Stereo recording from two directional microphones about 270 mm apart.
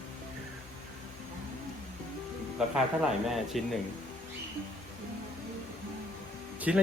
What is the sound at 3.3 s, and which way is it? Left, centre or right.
Speech, centre.